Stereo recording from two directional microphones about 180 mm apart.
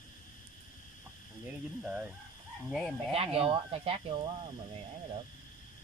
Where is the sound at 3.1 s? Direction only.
35° right (ahead or behind).